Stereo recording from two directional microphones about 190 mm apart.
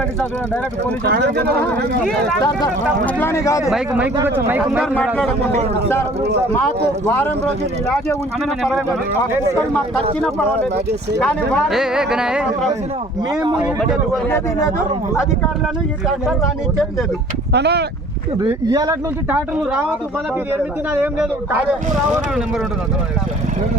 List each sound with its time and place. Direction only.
0.2 s speech: 10° left (ahead or behind)
1.0 s speech: 60° right (ahead or behind)
3.2 s speech: 15° left (ahead or behind)
3.6 s speech: 5° right (ahead or behind)
5.1 s speech: 5° left (ahead or behind)
7.1 s speech: 10° left (ahead or behind)
11.2 s speech: 5° left (ahead or behind)
13.3 s speech: 25° right (ahead or behind)
13.6 s speech: 5° right (ahead or behind)
14.3 s speech: 10° left (ahead or behind)
17.5 s speech: 60° right (ahead or behind)
18.3 s speech: 20° right (ahead or behind)
19.3 s speech: 10° right (ahead or behind)
21.0 s speech: 10° right (ahead or behind)